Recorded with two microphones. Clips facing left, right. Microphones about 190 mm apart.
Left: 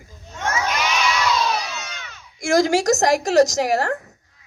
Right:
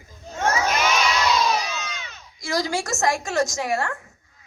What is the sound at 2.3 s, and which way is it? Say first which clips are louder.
Speech: left 8 dB; 50° left (ahead or behind).